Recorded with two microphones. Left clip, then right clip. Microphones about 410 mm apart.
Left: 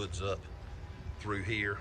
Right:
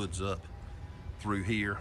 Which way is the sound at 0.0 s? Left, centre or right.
Centre.